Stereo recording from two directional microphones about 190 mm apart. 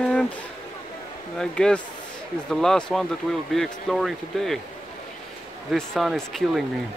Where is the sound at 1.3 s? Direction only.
5° left (ahead or behind).